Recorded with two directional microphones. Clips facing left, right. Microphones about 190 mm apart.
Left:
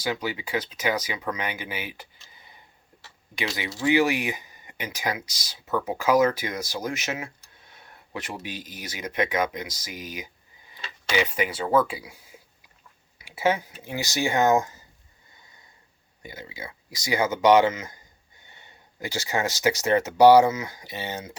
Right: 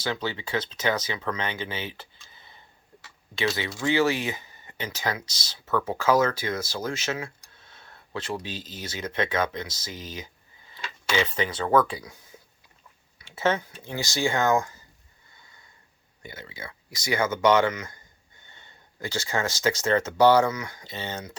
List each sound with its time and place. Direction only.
0.0 s speech: 10° left (ahead or behind)
12.0 s a sound: 10° left (ahead or behind)
13.1 s speech: 10° left (ahead or behind)
16.2 s speech: 15° left (ahead or behind)